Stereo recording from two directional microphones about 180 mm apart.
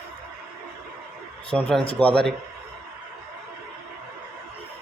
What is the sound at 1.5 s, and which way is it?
Speech, 5° right (ahead or behind).